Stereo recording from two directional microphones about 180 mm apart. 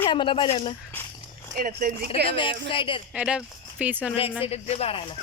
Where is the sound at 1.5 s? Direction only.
50° right (ahead or behind).